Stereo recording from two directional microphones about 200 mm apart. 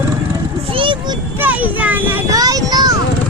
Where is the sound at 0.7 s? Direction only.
25° right (ahead or behind).